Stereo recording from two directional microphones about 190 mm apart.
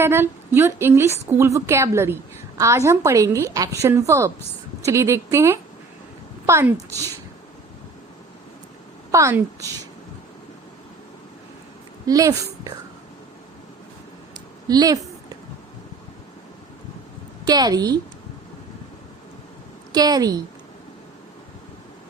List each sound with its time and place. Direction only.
0.0 s a woman's voice: 10° right (ahead or behind)
9.1 s a woman's voice: 15° right (ahead or behind)
12.0 s a woman's voice: 20° right (ahead or behind)
14.7 s a sound: 20° right (ahead or behind)
17.4 s a woman's voice: 20° right (ahead or behind)
19.9 s a woman's voice: 20° right (ahead or behind)